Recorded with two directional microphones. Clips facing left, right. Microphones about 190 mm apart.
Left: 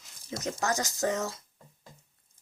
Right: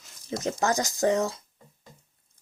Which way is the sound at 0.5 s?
25° right (ahead or behind).